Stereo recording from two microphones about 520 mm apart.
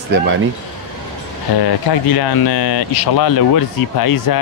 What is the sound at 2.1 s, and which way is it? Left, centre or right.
Speech, left.